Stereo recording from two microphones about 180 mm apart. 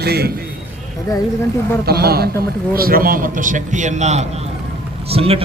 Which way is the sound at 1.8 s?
60° right (ahead or behind).